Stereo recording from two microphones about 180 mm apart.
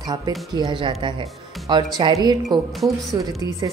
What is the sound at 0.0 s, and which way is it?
Speech, 20° right (ahead or behind).